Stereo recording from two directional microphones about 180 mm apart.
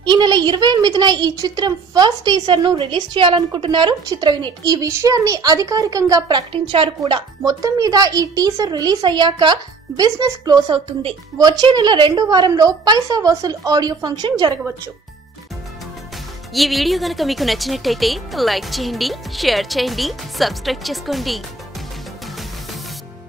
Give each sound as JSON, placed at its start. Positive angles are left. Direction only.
{"t": 0.0, "sound": "a woman's voice", "side_deg": -25}
{"t": 16.5, "sound": "a woman's voice", "side_deg": 0}